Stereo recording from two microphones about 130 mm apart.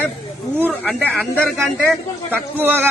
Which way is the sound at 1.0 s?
10° left (ahead or behind).